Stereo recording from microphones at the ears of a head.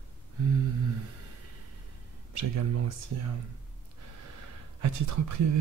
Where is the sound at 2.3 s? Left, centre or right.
Right.